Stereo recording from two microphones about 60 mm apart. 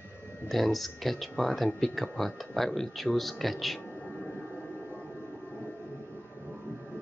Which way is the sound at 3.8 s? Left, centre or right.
Left.